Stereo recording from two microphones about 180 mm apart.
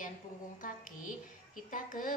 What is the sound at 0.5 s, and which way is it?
A woman's voice, 50° left (ahead or behind).